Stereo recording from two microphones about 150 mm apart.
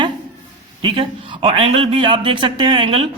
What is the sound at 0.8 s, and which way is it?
A man's voice, 35° right (ahead or behind).